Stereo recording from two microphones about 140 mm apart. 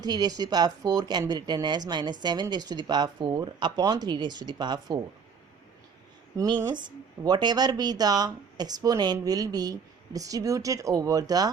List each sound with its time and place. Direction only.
0.0 s speech: 30° right (ahead or behind)
6.3 s speech: 25° right (ahead or behind)